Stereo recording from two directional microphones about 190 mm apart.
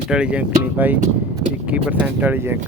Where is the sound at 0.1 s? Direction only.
5° right (ahead or behind).